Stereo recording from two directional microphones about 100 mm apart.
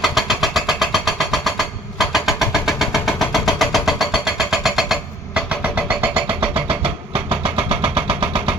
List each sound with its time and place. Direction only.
0.0 s vehicle: centre (ahead or behind); by 6.3 s 15° right (ahead or behind)
6.4 s vehicle: 65° right (ahead or behind)